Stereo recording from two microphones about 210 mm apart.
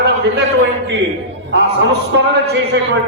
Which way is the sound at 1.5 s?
55° right (ahead or behind).